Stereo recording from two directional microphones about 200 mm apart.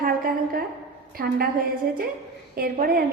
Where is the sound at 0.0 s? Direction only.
45° right (ahead or behind).